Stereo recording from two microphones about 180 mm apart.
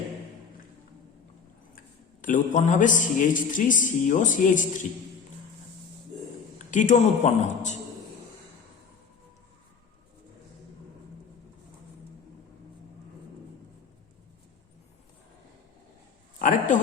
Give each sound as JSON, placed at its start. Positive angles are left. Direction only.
{"t": 2.2, "sound": "speech", "side_deg": 45}
{"t": 6.6, "sound": "speech", "side_deg": 45}
{"t": 16.4, "sound": "a sound", "side_deg": 45}